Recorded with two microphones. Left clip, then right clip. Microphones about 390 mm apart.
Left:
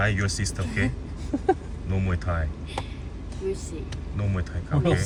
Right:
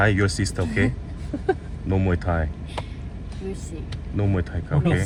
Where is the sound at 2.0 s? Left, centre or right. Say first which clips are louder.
Right 5 dB; centre.